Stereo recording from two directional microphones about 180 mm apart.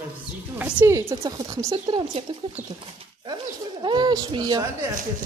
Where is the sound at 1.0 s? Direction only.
20° right (ahead or behind).